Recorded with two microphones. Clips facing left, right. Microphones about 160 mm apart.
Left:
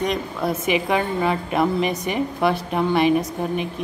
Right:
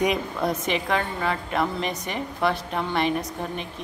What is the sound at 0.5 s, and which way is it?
A woman's voice, 10° left (ahead or behind).